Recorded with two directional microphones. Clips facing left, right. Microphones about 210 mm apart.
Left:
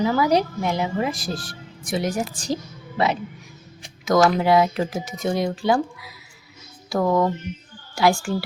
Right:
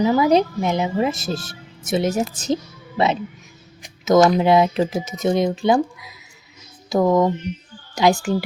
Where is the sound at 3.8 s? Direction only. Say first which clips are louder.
Right 4 dB; 20° right (ahead or behind).